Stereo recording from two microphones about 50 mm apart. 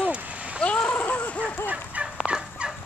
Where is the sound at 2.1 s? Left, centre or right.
Centre.